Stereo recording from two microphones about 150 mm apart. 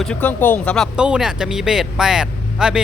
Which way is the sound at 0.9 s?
5° right (ahead or behind).